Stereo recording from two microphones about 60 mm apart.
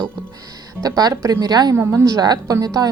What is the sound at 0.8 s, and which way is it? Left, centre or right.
Speech, right.